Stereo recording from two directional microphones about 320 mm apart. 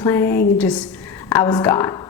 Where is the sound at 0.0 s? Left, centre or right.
Centre.